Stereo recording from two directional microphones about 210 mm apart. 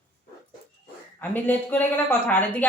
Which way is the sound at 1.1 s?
10° left (ahead or behind).